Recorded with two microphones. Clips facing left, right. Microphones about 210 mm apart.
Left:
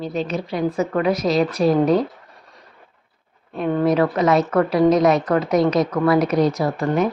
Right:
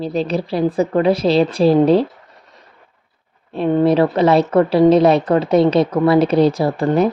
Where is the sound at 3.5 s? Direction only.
25° right (ahead or behind).